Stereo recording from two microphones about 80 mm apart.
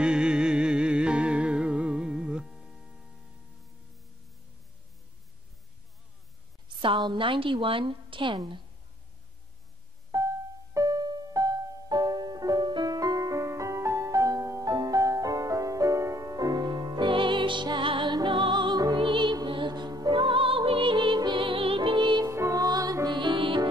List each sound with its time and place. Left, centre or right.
0.0 s music: centre
6.8 s a woman's voice: right
10.1 s music: right
20.1 s music: right
22.2 s music: right
22.7 s music: right
23.0 s music: right